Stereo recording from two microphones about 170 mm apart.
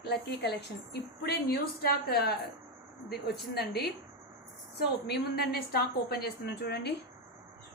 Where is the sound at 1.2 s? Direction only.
65° left (ahead or behind).